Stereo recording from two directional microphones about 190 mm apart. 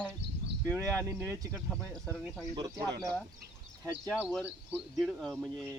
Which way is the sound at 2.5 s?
20° right (ahead or behind).